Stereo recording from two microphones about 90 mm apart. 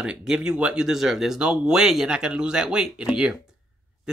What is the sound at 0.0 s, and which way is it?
Speech, 5° right (ahead or behind).